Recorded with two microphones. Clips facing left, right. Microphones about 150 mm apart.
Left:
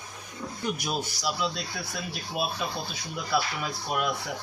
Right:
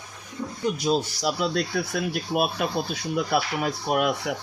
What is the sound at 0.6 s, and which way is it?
Speech, 25° right (ahead or behind).